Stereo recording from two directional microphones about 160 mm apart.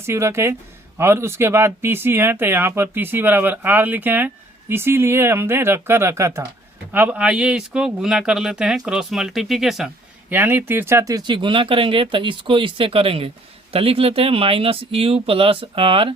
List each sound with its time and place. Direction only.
0.0 s speech: 15° right (ahead or behind); by 16.1 s 35° right (ahead or behind)